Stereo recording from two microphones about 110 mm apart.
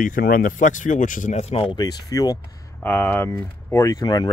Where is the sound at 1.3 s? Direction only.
75° left (ahead or behind).